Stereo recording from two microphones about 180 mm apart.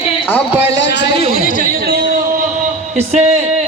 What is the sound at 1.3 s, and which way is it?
Speech, 50° left (ahead or behind).